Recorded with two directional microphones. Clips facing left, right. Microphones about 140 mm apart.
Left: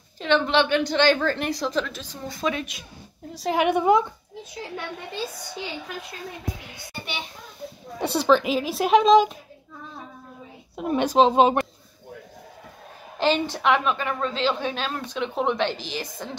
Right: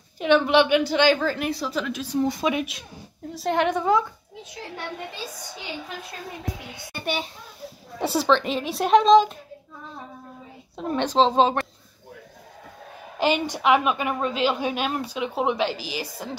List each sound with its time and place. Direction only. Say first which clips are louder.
0.2 s a woman's voice: right 3 dB; 10° right (ahead or behind)
3.3 s a woman's voice: even; centre (ahead or behind)
3.6 s a woman's voice: left 4 dB; 15° left (ahead or behind)
6.9 s a child's voice: right 6 dB; 45° right (ahead or behind)
8.0 s a woman's voice: left 1 dB; 5° right (ahead or behind)
10.8 s a woman's voice: left 2 dB; 10° left (ahead or behind)
13.2 s a woman's voice: even; 10° right (ahead or behind)